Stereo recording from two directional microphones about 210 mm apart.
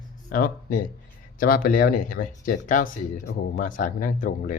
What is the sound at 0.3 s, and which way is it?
Speech, 45° left (ahead or behind).